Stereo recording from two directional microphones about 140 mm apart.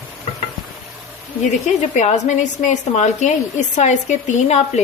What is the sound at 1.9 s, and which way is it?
Speech, 60° left (ahead or behind).